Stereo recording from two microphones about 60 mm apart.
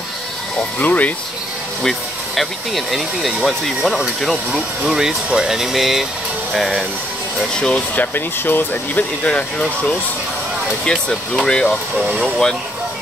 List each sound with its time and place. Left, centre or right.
0.7 s speech: left
1.8 s speech: centre
4.8 s speech: centre
7.3 s speech: centre
7.9 s speech: left
10.9 s speech: centre